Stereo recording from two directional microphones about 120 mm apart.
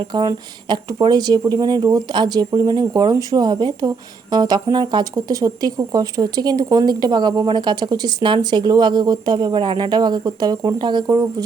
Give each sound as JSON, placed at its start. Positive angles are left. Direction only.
{"t": 0.1, "sound": "speech", "side_deg": -35}